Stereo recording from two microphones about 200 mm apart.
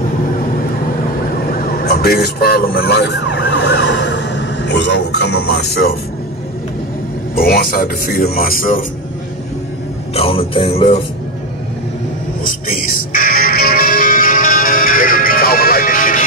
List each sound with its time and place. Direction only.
1.5 s emergency vehicle: 45° left (ahead or behind)
7.3 s a man's voice: 45° left (ahead or behind)
10.1 s speech: 30° left (ahead or behind)
12.4 s music: 45° left (ahead or behind)